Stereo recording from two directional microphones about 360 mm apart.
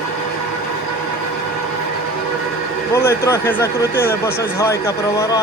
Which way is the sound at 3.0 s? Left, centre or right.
Centre.